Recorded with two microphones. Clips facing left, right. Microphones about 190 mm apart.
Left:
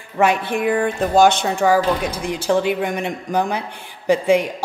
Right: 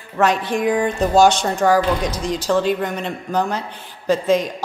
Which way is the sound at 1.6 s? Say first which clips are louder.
Even; 5° left (ahead or behind).